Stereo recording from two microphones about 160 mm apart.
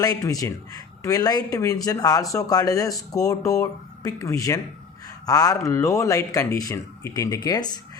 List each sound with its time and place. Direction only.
0.0 s speech: 20° left (ahead or behind)
5.0 s a sound: 25° left (ahead or behind)
5.6 s speech: 20° left (ahead or behind)